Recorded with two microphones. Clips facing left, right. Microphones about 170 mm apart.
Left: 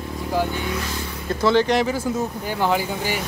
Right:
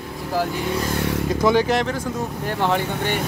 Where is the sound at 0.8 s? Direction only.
70° right (ahead or behind).